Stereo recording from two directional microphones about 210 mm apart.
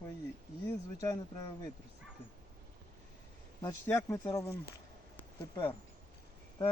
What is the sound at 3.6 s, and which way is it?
Speech, 15° left (ahead or behind).